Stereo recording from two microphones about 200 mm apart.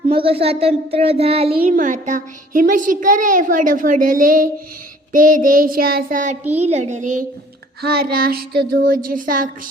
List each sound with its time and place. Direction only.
0.1 s child singing: 30° right (ahead or behind)
1.5 s a child's voice: 40° right (ahead or behind)
5.1 s child singing: 45° right (ahead or behind)
6.7 s a child's voice: 35° right (ahead or behind)
7.8 s child singing: 50° right (ahead or behind)